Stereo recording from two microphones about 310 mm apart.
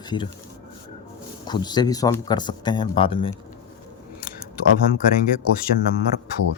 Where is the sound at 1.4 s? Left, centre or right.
Centre.